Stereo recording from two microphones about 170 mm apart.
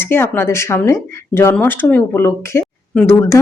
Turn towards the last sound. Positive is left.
turn(degrees=15)  # may be behind; listen again after turning